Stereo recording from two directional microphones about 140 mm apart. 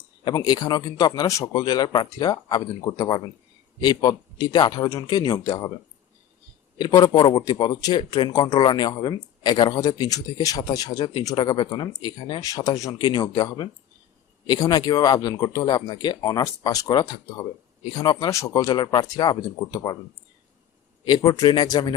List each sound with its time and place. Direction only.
0.3 s a man's voice: 30° left (ahead or behind)
6.7 s a man's voice: 30° left (ahead or behind)
21.0 s speech: 30° left (ahead or behind)